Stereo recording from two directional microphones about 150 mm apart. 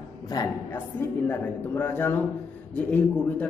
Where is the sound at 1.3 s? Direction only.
10° left (ahead or behind).